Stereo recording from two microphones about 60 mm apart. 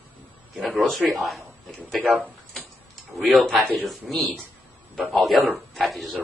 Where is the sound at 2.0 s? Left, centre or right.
Right.